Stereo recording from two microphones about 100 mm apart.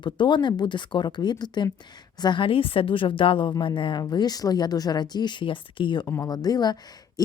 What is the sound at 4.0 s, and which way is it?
Speech, 45° left (ahead or behind).